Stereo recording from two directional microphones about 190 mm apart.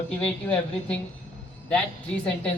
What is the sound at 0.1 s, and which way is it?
Speech, 5° left (ahead or behind).